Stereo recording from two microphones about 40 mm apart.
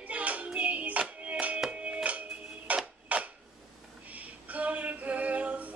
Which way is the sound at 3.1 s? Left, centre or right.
Right.